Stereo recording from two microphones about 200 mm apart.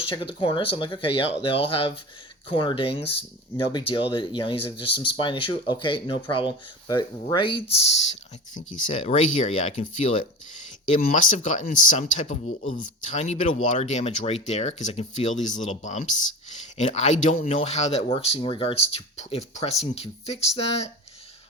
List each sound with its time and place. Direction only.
0.0 s speech: 25° left (ahead or behind)